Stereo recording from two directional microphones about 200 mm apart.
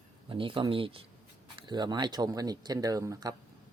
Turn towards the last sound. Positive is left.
turn(degrees=-15)  # may be behind; listen again after turning